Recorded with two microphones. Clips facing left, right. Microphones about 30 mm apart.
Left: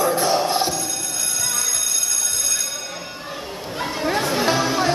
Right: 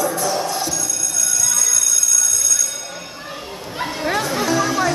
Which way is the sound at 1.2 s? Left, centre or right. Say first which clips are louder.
Right 5 dB; left.